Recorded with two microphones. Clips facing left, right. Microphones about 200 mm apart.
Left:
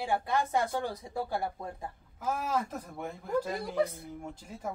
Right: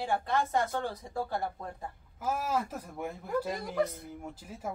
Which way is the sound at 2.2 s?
5° right (ahead or behind).